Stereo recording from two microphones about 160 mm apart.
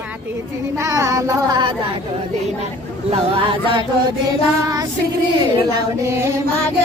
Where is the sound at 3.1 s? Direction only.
35° right (ahead or behind).